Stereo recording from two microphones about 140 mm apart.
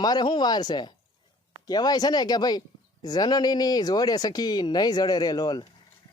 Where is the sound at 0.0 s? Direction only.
30° left (ahead or behind).